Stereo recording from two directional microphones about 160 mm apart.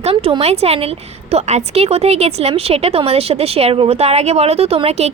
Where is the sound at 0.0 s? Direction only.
35° right (ahead or behind).